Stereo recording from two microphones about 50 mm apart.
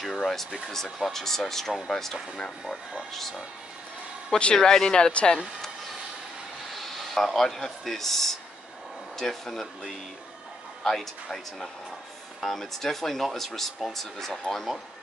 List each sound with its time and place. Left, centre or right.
0.0 s speech: centre
4.6 s speech: centre
6.7 s speech: centre